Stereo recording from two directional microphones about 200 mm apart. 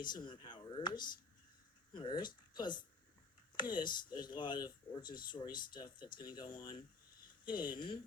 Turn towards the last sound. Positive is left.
turn(degrees=25)  # may be behind; listen again after turning